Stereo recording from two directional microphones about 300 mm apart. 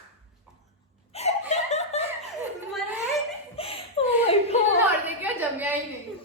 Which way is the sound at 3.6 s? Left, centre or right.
Centre.